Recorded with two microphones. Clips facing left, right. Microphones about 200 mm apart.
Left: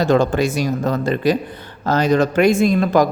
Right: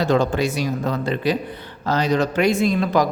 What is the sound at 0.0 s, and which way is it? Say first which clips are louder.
Speech: left 3 dB; 50° left (ahead or behind).